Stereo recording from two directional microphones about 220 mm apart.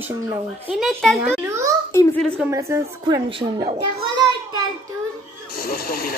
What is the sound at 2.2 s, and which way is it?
Speech, centre (ahead or behind).